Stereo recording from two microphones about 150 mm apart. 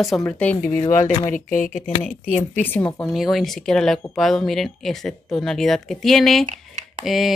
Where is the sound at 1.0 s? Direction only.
60° left (ahead or behind).